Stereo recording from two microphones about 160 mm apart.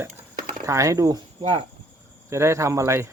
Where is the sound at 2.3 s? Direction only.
15° right (ahead or behind).